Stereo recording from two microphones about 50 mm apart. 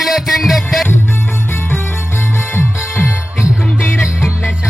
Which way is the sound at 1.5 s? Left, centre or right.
Left.